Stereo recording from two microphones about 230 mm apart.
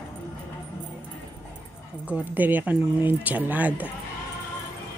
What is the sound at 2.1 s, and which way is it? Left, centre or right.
Speech, centre.